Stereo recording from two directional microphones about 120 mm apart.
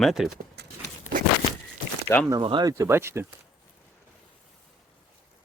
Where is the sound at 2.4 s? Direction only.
45° right (ahead or behind).